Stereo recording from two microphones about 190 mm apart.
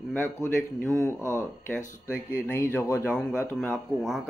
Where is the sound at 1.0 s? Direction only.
15° right (ahead or behind).